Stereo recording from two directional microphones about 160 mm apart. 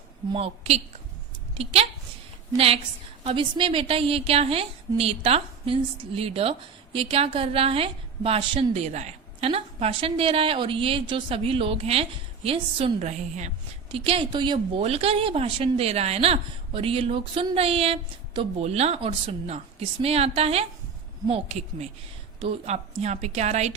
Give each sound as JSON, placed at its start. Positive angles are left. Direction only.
{"t": 0.3, "sound": "a woman's voice", "side_deg": -40}